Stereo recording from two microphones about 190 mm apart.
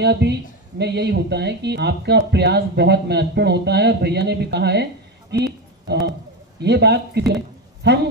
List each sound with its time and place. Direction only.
0.0 s speech: 60° right (ahead or behind)
5.3 s a sound: 60° right (ahead or behind)
6.6 s speech: 60° right (ahead or behind)